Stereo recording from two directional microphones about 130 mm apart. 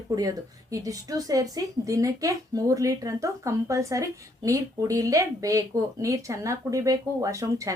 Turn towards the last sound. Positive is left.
turn(degrees=-25)  # may be behind; listen again after turning